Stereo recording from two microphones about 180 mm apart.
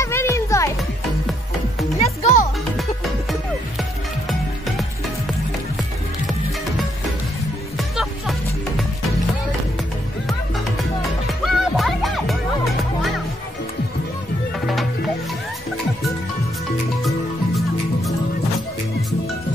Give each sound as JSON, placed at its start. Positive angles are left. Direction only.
{"t": 0.0, "sound": "music", "side_deg": 15}
{"t": 2.0, "sound": "music", "side_deg": 40}
{"t": 7.7, "sound": "music", "side_deg": 0}
{"t": 11.4, "sound": "music", "side_deg": 0}